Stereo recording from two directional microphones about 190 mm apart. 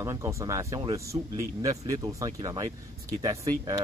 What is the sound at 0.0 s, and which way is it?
Speech, 15° right (ahead or behind).